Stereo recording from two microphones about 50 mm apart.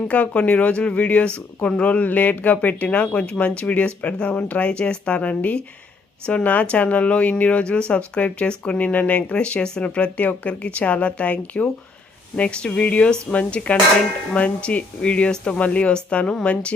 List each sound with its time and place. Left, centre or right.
0.1 s speech: left